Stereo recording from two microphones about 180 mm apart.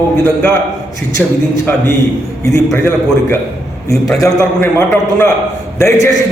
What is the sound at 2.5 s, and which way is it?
A man's voice, 15° left (ahead or behind).